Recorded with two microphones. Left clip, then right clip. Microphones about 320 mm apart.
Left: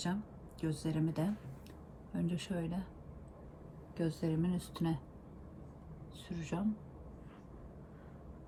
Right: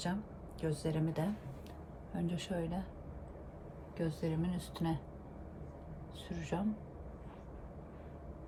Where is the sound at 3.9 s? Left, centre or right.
Centre.